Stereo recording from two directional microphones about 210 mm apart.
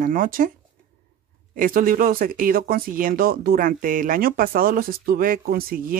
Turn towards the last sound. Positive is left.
turn(degrees=-45)  # may be behind; listen again after turning